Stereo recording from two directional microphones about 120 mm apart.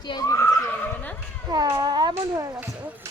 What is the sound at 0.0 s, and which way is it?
Neigh, 40° left (ahead or behind).